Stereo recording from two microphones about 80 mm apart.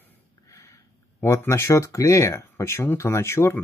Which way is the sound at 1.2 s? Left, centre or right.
Left.